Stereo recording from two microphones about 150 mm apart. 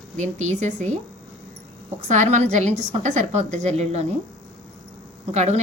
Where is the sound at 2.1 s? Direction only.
50° right (ahead or behind).